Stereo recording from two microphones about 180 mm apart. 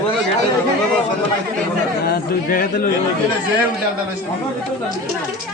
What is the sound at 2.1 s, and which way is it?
Speech, 50° left (ahead or behind).